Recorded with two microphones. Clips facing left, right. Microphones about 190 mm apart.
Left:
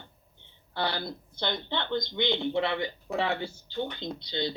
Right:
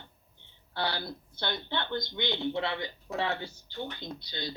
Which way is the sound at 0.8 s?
20° left (ahead or behind).